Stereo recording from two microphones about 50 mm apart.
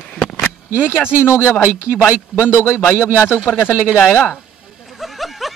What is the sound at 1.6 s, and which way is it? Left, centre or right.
Speech, right.